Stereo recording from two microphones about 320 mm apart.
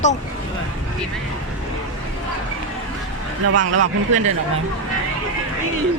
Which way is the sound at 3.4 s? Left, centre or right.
Right.